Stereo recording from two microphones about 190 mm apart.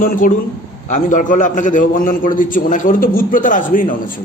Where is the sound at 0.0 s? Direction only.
45° left (ahead or behind).